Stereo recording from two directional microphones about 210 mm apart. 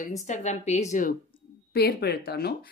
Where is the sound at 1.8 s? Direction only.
50° left (ahead or behind).